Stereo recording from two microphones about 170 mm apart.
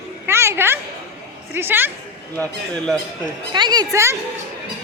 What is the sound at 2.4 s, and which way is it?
Speech, 5° left (ahead or behind).